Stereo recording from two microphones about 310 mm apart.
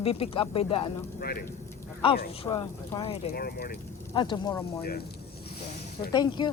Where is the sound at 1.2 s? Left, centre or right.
Left.